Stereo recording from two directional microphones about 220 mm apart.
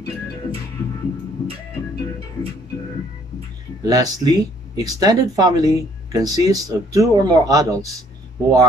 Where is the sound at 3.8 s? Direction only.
15° right (ahead or behind).